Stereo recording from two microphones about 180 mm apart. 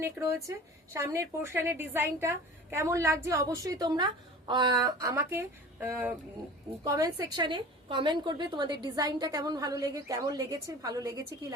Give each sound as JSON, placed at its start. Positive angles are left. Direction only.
{"t": 0.0, "sound": "a woman's voice", "side_deg": -15}